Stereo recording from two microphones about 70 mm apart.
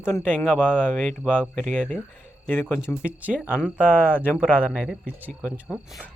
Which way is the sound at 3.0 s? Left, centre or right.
Centre.